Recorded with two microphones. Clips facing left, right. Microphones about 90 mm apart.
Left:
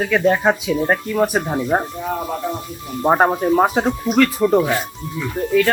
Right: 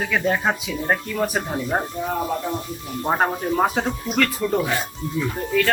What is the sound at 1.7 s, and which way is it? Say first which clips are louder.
Speech: left 5 dB; 15° left (ahead or behind).